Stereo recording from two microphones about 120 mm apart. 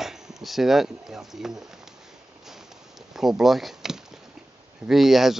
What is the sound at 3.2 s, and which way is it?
Speech, centre (ahead or behind).